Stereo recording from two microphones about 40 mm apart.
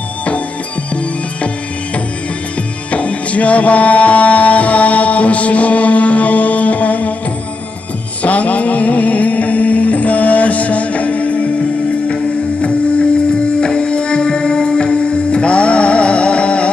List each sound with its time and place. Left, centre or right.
2.9 s music: left
8.2 s music: left
13.3 s music: left